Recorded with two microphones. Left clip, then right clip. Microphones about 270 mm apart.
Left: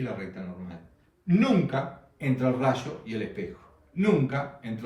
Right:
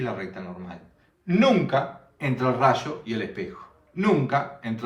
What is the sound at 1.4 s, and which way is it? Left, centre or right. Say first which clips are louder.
A man's voice: right 6 dB; centre.